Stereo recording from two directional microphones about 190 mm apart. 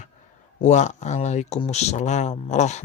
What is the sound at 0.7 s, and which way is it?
Speech, 40° left (ahead or behind).